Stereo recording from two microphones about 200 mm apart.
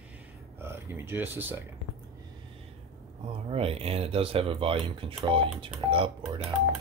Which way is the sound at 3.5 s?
30° right (ahead or behind).